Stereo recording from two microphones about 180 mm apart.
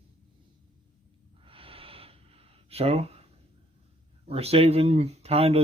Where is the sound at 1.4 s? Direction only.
30° right (ahead or behind).